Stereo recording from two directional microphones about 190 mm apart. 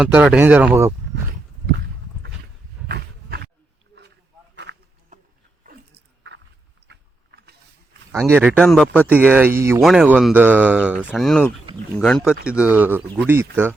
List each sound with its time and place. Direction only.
0.0 s speech: 5° right (ahead or behind)
2.9 s roaring cats: 60° right (ahead or behind)
4.7 s a sound: 75° right (ahead or behind)
5.6 s biting: 65° right (ahead or behind)
6.8 s vehicle: 60° right (ahead or behind)
8.3 s speech: 10° right (ahead or behind)
8.6 s speech: 5° left (ahead or behind)
9.0 s speech: 10° right (ahead or behind)
9.8 s speech: 5° right (ahead or behind)